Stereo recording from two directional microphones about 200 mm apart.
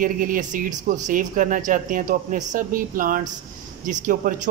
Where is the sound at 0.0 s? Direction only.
45° right (ahead or behind).